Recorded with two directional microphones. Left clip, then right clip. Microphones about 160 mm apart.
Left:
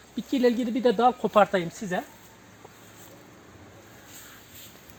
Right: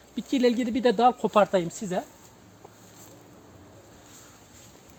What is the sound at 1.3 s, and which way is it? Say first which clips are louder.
Speech: left 1 dB; 35° right (ahead or behind).